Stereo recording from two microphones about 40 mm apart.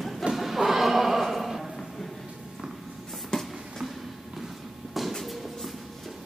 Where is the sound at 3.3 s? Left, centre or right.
Centre.